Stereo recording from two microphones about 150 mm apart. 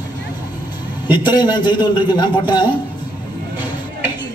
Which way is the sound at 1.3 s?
30° left (ahead or behind).